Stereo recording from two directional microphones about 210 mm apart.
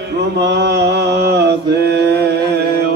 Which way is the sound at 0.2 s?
55° right (ahead or behind).